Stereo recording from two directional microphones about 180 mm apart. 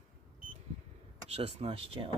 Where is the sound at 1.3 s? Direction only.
35° right (ahead or behind).